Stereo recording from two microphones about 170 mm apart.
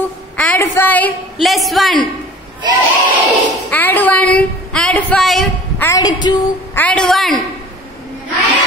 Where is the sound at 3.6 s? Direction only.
10° left (ahead or behind).